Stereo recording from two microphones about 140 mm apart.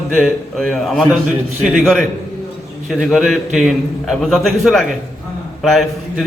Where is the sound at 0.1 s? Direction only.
5° left (ahead or behind).